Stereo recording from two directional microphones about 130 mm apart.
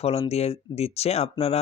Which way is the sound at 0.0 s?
50° left (ahead or behind).